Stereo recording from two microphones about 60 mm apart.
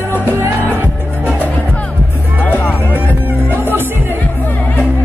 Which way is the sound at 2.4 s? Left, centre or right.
Left.